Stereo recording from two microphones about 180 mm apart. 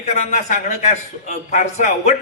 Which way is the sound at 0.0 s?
40° left (ahead or behind).